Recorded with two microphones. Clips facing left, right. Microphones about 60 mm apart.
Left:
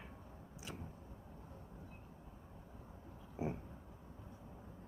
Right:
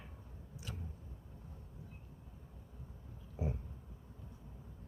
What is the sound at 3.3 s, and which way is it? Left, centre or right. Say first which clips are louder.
Oink: even; left.